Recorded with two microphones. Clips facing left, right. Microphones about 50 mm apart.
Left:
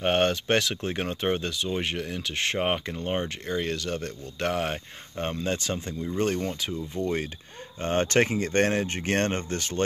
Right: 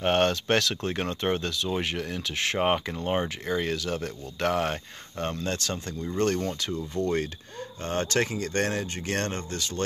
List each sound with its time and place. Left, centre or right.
0.0 s speech: centre
5.2 s speech: centre
7.8 s speech: left